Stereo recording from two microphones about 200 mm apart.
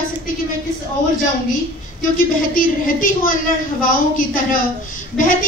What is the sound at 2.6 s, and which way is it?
A woman's voice, 45° left (ahead or behind).